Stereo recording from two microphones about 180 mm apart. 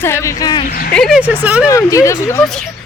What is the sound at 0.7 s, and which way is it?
Speech, 50° left (ahead or behind).